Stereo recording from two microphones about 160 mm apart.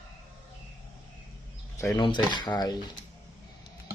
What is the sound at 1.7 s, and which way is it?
Speech, 20° left (ahead or behind).